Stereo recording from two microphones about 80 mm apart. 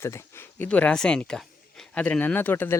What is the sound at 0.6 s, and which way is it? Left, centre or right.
Speech, centre.